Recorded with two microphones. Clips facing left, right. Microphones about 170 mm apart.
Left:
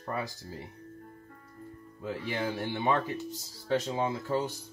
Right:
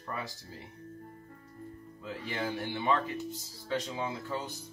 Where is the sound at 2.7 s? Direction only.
40° left (ahead or behind).